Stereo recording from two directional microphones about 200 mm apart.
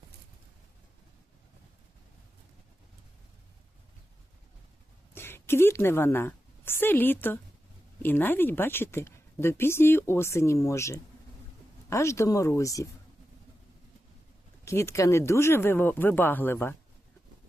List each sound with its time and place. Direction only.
5.1 s a woman's voice: 10° left (ahead or behind)
14.6 s a woman's voice: 15° left (ahead or behind)